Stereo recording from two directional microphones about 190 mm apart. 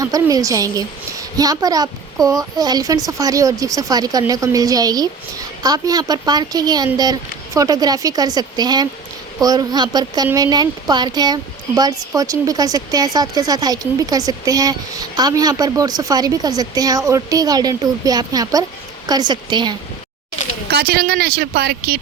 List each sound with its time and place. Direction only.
0.0 s speech: 20° right (ahead or behind)
20.7 s speech: 55° right (ahead or behind)